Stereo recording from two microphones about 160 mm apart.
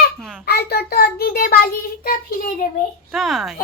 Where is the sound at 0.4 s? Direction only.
85° left; by 2.1 s 65° left (ahead or behind).